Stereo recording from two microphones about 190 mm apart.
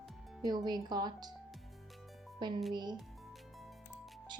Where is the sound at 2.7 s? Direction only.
25° right (ahead or behind).